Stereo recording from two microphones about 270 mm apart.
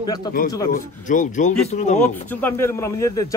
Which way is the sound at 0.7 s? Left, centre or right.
Left.